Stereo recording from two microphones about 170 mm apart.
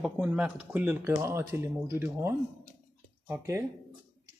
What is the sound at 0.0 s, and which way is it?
Speech, 5° right (ahead or behind).